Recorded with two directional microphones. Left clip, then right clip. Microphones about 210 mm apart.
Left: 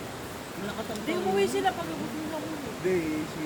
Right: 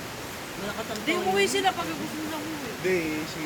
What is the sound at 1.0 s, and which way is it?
Speech, 20° right (ahead or behind).